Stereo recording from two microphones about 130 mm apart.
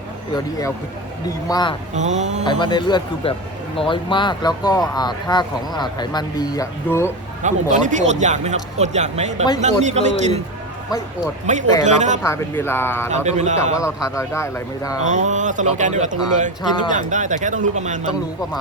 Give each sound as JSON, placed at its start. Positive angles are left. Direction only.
{"t": 1.5, "sound": "speech", "side_deg": 30}
{"t": 2.0, "sound": "speech", "side_deg": -65}
{"t": 2.5, "sound": "speech", "side_deg": 40}
{"t": 7.4, "sound": "speech", "side_deg": -70}
{"t": 11.8, "sound": "speech", "side_deg": -65}
{"t": 12.2, "sound": "speech", "side_deg": 20}
{"t": 13.1, "sound": "speech", "side_deg": -60}
{"t": 13.7, "sound": "speech", "side_deg": 25}
{"t": 15.0, "sound": "speech", "side_deg": -70}